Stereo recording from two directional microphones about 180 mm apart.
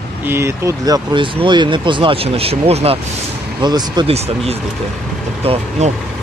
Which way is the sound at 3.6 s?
25° right (ahead or behind).